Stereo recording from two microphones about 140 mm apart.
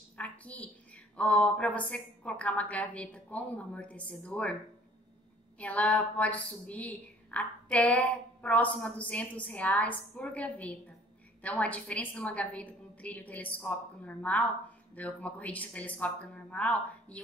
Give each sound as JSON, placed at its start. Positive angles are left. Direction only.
{"t": 0.2, "sound": "a sound", "side_deg": 10}
{"t": 1.1, "sound": "a woman's voice", "side_deg": 10}
{"t": 5.6, "sound": "a woman's voice", "side_deg": 10}